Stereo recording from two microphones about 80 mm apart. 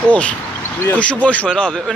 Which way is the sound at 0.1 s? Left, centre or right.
Centre.